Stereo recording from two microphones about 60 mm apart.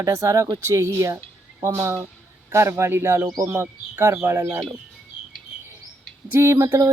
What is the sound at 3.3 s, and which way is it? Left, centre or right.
Speech, right.